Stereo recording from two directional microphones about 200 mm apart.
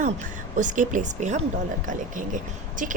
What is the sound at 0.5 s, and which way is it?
A woman's voice, 40° right (ahead or behind).